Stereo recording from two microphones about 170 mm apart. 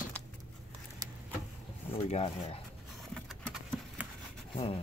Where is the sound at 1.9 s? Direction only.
40° left (ahead or behind).